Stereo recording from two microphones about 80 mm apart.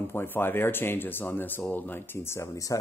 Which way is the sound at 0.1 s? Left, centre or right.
Left.